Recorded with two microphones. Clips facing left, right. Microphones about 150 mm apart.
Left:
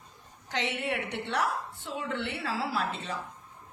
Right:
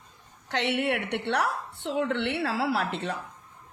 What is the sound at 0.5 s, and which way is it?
A woman's voice, 70° right (ahead or behind).